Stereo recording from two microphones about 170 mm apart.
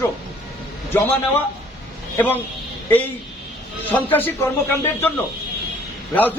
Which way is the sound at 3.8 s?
10° left (ahead or behind).